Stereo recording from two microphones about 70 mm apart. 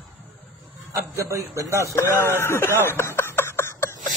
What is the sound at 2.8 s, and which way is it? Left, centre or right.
Snicker, left.